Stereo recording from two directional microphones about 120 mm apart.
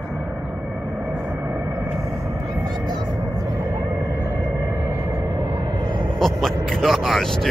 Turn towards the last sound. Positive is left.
turn(degrees=0)  # may be behind; listen again after turning